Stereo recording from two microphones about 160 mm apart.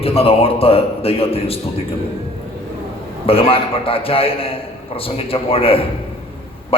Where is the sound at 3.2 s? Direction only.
35° left (ahead or behind).